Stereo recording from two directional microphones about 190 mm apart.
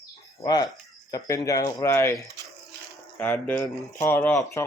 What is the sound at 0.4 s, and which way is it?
Speech, 20° left (ahead or behind).